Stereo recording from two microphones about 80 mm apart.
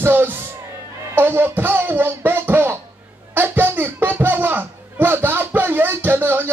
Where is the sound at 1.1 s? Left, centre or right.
Right.